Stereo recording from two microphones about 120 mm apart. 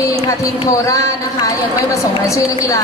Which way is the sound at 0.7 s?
30° left (ahead or behind).